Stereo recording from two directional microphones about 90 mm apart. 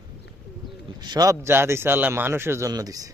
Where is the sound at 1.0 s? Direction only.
50° right (ahead or behind).